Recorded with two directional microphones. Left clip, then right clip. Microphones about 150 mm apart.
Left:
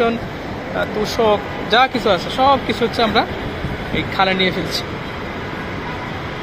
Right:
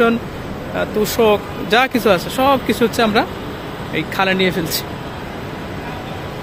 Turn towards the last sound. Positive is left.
turn(degrees=-55)  # may be behind; listen again after turning